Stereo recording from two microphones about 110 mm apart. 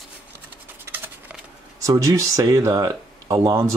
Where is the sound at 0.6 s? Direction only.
20° right (ahead or behind).